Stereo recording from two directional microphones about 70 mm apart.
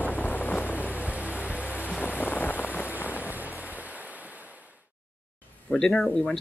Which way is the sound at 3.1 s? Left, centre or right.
Right.